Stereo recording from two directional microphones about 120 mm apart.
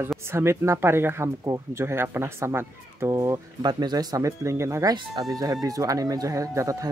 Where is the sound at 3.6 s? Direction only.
35° right (ahead or behind).